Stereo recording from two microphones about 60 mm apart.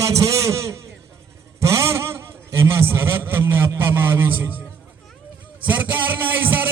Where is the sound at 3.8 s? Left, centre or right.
Right.